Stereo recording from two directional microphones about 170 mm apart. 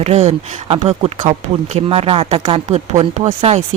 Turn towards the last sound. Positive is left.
turn(degrees=-35)  # may be behind; listen again after turning